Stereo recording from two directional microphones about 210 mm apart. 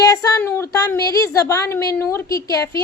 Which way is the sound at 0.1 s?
15° left (ahead or behind).